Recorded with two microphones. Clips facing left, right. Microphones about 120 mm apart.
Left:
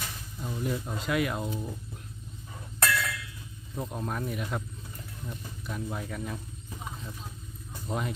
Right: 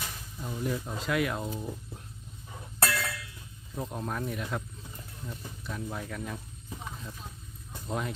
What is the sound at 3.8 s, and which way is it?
Speech, centre (ahead or behind).